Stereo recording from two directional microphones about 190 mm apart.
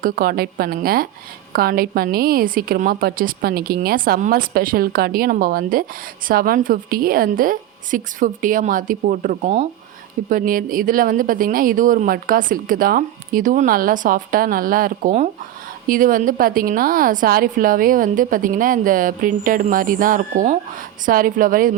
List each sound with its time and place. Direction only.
0.0 s a woman's voice: 50° right (ahead or behind)